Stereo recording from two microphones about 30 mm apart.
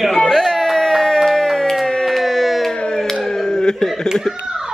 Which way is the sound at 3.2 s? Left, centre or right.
Centre.